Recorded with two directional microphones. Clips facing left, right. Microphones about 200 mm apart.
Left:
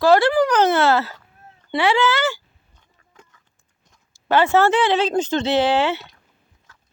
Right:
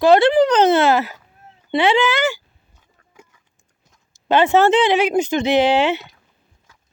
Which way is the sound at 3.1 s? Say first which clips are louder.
Right 3 dB; 10° right (ahead or behind).